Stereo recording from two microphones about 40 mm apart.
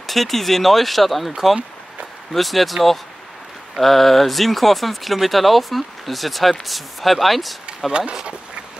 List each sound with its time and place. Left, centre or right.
0.0 s speech: centre
2.3 s speech: centre
7.9 s speech: right